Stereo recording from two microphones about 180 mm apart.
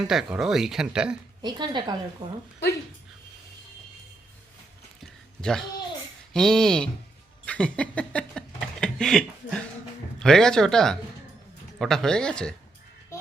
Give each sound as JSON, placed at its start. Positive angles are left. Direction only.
{"t": 0.1, "sound": "speech", "side_deg": -5}
{"t": 1.4, "sound": "a woman's voice", "side_deg": -25}
{"t": 5.4, "sound": "speech", "side_deg": 5}
{"t": 7.4, "sound": "a sound", "side_deg": 5}
{"t": 10.2, "sound": "speech", "side_deg": 5}